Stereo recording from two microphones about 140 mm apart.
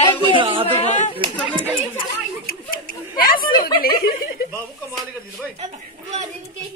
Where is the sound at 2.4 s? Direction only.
90° left.